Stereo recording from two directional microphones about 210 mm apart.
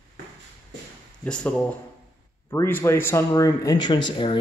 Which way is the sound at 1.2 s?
5° left (ahead or behind).